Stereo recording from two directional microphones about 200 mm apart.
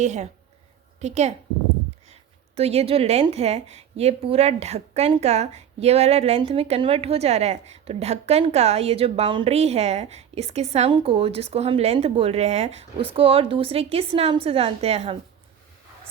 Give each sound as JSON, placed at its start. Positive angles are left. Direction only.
{"t": 0.0, "sound": "a woman's voice", "side_deg": -35}
{"t": 2.6, "sound": "a woman's voice", "side_deg": -30}